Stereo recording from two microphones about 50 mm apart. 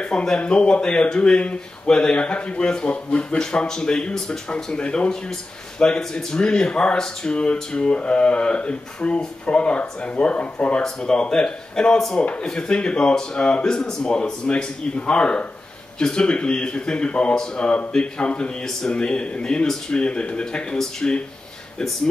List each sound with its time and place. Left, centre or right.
0.0 s speech: centre
10.8 s speech: centre